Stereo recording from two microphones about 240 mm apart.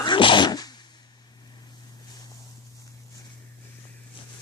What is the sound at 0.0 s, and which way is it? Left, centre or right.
Sneeze, centre.